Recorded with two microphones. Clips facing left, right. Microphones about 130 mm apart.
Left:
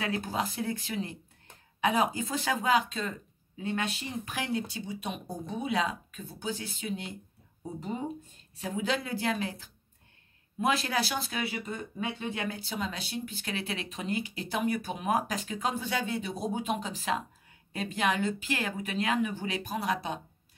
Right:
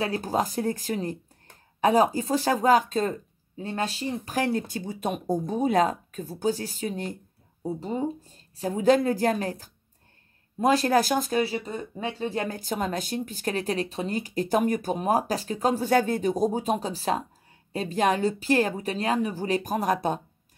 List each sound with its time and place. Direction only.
0.0 s speech: 35° right (ahead or behind)